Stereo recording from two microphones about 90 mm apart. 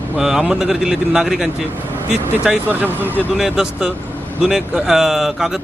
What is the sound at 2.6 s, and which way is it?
Speech, 20° right (ahead or behind).